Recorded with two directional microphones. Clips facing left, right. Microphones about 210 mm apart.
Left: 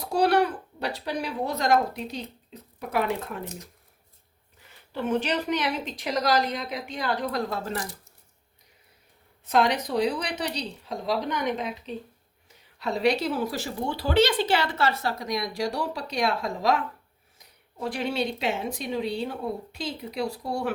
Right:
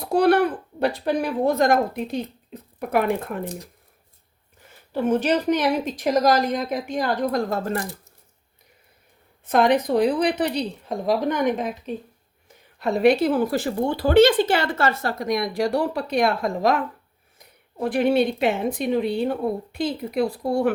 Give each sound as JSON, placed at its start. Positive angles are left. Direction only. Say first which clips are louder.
{"t": 0.0, "sound": "speech", "louder": "right 4 dB", "side_deg": -55}
{"t": 3.4, "sound": "speech", "louder": "right 6 dB", "side_deg": -35}
{"t": 4.6, "sound": "speech", "louder": "right 7 dB", "side_deg": -45}
{"t": 9.5, "sound": "a woman's voice", "louder": "right 5 dB", "side_deg": -55}